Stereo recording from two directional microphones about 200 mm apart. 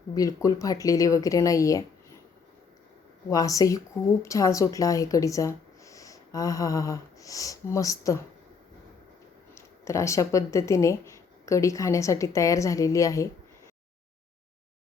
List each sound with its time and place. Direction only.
0.1 s speech: 15° left (ahead or behind)
3.2 s speech: 15° left (ahead or behind)
9.6 s speech: 15° left (ahead or behind)